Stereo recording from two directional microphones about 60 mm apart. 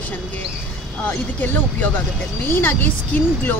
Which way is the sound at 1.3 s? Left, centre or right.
Left.